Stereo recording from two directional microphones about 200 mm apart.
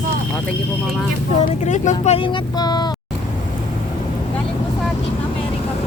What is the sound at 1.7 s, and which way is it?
Speech, 35° left (ahead or behind).